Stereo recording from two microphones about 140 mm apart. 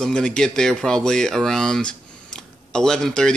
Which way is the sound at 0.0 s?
5° left (ahead or behind).